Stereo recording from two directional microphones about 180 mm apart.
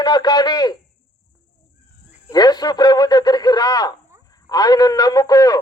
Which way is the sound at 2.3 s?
20° left (ahead or behind).